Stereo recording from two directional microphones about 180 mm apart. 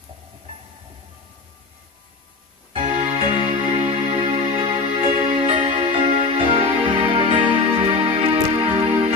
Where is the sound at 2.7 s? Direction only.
35° right (ahead or behind).